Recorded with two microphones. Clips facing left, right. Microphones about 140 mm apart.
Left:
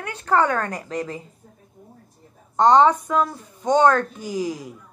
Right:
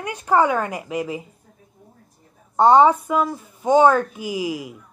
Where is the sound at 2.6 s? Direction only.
10° right (ahead or behind).